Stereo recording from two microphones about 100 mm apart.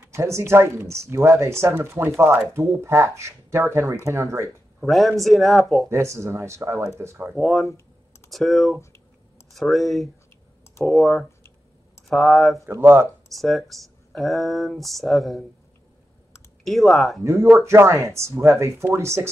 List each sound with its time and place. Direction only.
0.1 s speech: 30° right (ahead or behind)
4.8 s speech: centre (ahead or behind)
5.9 s speech: 30° right (ahead or behind)
7.3 s speech: centre (ahead or behind)
12.8 s speech: 20° right (ahead or behind)
13.3 s speech: centre (ahead or behind)
16.6 s speech: centre (ahead or behind)
17.2 s speech: 30° right (ahead or behind)